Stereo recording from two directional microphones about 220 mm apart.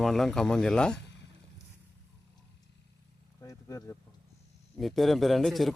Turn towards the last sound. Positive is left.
turn(degrees=0)  # may be behind; listen again after turning